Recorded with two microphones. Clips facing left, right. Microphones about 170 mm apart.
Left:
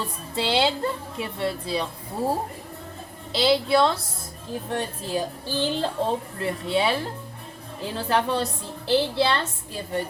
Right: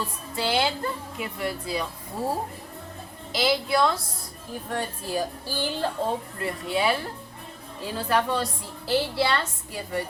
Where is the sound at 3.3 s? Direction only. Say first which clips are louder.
Left 4 dB; 30° left (ahead or behind).